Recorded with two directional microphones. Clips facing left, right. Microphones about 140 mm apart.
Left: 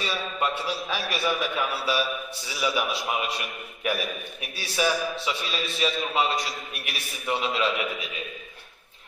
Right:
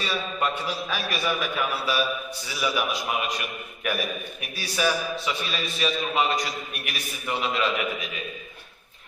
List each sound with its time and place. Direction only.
0.0 s a man's voice: 25° left (ahead or behind)